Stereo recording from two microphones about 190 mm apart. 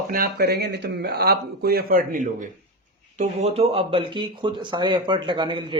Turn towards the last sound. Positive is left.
turn(degrees=-25)  # may be behind; listen again after turning